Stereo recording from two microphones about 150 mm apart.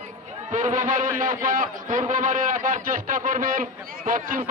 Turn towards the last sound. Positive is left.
turn(degrees=-65)  # may be behind; listen again after turning